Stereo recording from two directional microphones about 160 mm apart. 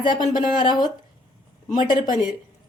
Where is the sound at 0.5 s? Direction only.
25° left (ahead or behind).